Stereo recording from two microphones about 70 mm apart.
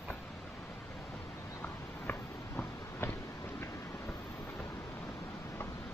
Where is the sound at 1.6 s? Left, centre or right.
Left.